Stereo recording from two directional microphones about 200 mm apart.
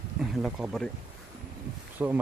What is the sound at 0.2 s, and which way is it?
Speech, 5° right (ahead or behind).